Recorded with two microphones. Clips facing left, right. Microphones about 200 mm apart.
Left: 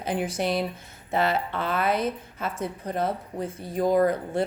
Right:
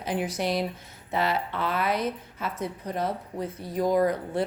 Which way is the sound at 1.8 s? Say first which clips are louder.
Left 3 dB; 25° left (ahead or behind).